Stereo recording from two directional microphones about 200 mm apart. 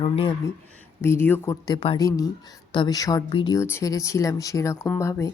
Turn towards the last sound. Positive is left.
turn(degrees=15)  # may be behind; listen again after turning